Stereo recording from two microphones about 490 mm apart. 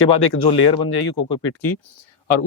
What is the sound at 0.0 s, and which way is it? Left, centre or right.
Speech, left.